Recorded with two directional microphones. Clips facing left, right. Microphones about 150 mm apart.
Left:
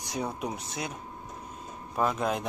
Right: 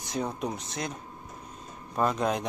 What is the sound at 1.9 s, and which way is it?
Speech, 5° left (ahead or behind).